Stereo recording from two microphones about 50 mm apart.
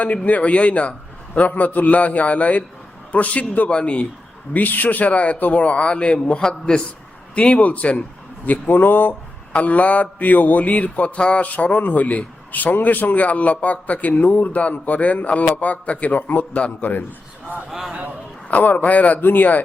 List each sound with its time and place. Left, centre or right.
0.0 s mantra: left
4.5 s mantra: left
6.4 s a man's voice: centre
7.3 s mantra: left
8.4 s a man's voice: left
9.5 s mantra: left
11.4 s a man's voice: left
16.6 s mantra: left
17.7 s a man's voice: centre
18.4 s a man's voice: left